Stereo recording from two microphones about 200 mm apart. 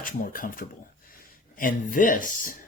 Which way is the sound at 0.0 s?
45° left (ahead or behind).